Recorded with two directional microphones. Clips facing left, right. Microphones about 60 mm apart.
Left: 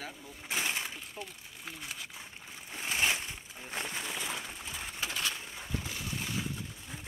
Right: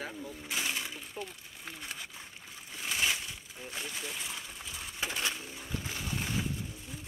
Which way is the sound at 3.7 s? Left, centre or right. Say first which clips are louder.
Left 3 dB; left.